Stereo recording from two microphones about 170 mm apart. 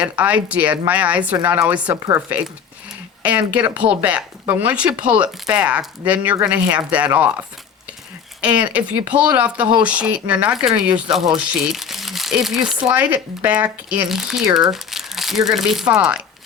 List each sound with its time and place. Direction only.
0.0 s speech: 10° right (ahead or behind)